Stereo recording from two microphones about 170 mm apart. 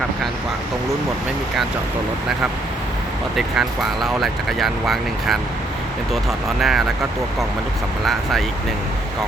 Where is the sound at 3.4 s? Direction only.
Centre (ahead or behind).